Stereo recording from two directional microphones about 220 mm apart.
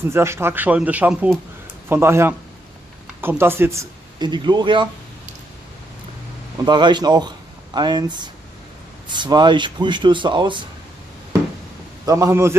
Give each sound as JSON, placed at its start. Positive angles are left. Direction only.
{"t": 0.1, "sound": "speech", "side_deg": -10}
{"t": 6.6, "sound": "speech", "side_deg": -20}
{"t": 12.1, "sound": "speech", "side_deg": -15}